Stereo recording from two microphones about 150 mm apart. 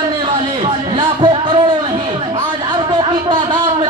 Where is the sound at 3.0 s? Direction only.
30° right (ahead or behind).